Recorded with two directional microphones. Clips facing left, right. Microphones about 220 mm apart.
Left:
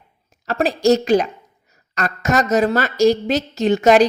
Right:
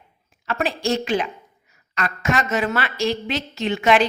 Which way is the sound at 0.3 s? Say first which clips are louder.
Left 5 dB; 40° left (ahead or behind).